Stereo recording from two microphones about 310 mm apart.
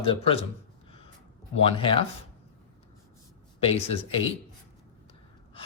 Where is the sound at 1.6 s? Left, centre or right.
Centre.